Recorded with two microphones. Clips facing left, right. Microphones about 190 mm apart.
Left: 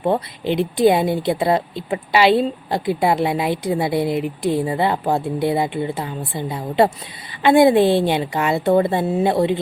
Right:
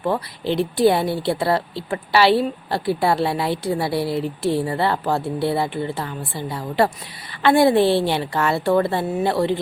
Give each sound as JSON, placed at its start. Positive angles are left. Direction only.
{"t": 0.0, "sound": "a woman's voice", "side_deg": 20}